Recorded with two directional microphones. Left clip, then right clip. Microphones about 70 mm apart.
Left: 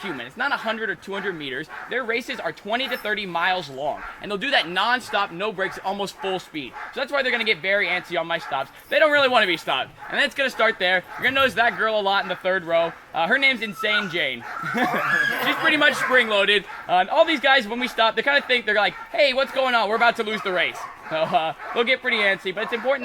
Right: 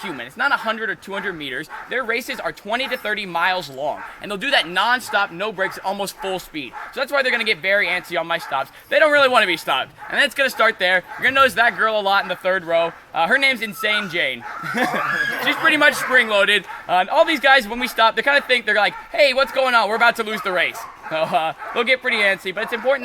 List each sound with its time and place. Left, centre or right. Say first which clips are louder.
0.0 s speech: right 4 dB; right
15.1 s speech: even; centre
15.6 s speech: right 4 dB; right